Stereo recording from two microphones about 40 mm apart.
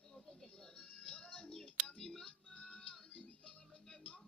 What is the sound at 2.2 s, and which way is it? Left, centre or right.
Music, left.